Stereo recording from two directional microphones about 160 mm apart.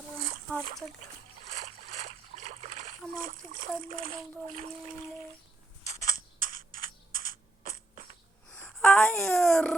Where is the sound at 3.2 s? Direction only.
60° right (ahead or behind).